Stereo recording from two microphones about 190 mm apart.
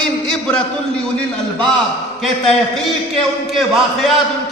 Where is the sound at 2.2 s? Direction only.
Centre (ahead or behind).